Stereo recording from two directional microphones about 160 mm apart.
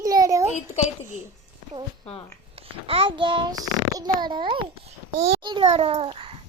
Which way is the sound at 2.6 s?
35° right (ahead or behind).